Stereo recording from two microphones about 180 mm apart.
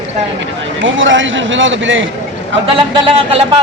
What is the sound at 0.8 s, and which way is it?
A man's voice, 90° right.